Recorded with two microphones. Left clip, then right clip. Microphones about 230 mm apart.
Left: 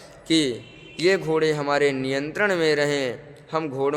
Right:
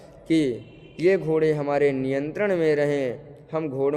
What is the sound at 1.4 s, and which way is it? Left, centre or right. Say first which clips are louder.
A man's voice: even; centre.